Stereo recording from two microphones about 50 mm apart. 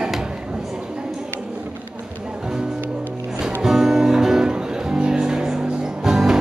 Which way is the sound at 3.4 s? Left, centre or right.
Centre.